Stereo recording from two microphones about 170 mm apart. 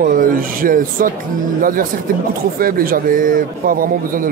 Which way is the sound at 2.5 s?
60° right (ahead or behind).